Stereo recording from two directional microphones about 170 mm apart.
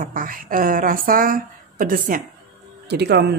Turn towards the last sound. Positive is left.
turn(degrees=-75)  # may be behind; listen again after turning